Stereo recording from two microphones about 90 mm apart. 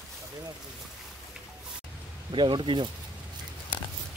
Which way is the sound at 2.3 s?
65° right (ahead or behind).